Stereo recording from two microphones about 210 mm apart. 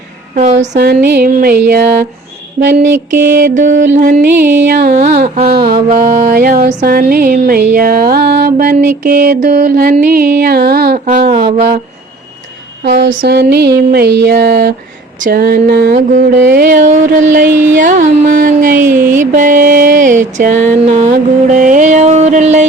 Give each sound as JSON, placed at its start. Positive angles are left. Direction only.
{"t": 0.3, "sound": "speech", "side_deg": -35}
{"t": 0.8, "sound": "music", "side_deg": -50}
{"t": 2.6, "sound": "mantra", "side_deg": -40}
{"t": 4.5, "sound": "music", "side_deg": -50}
{"t": 4.9, "sound": "mantra", "side_deg": -35}
{"t": 5.9, "sound": "mantra", "side_deg": -35}
{"t": 6.7, "sound": "music", "side_deg": -45}
{"t": 11.3, "sound": "speech", "side_deg": -25}
{"t": 12.8, "sound": "music", "side_deg": -55}
{"t": 16.6, "sound": "mantra", "side_deg": -35}